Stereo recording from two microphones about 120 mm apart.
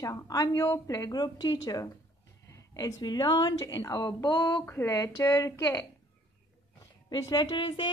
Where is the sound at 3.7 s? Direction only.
25° left (ahead or behind).